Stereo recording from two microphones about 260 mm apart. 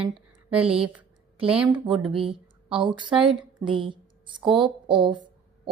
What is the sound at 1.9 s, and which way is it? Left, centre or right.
Speech, centre.